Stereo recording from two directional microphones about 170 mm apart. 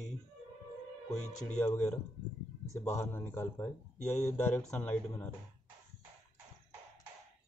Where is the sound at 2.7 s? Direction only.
15° left (ahead or behind).